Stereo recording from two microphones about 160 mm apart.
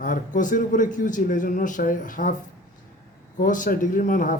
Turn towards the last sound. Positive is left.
turn(degrees=55)  # may be behind; listen again after turning